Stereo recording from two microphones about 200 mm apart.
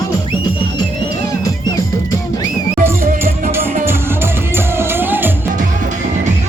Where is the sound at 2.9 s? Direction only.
10° right (ahead or behind).